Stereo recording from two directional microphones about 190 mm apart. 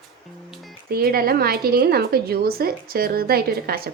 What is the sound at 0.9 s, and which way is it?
A woman's voice, 50° right (ahead or behind).